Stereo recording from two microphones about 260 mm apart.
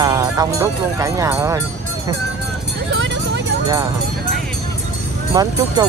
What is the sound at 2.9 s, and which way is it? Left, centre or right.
Vehicle, right.